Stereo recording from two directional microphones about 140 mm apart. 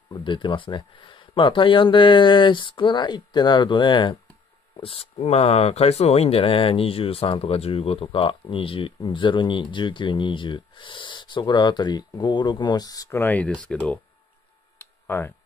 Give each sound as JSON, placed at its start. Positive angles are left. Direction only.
{"t": 0.1, "sound": "speech", "side_deg": 35}
{"t": 13.2, "sound": "speech", "side_deg": 10}
{"t": 14.8, "sound": "a sound", "side_deg": 15}